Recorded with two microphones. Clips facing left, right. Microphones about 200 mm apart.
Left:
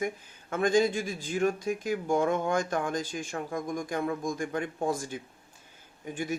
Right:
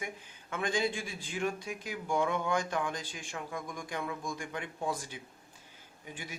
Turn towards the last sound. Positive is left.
turn(degrees=50)  # may be behind; listen again after turning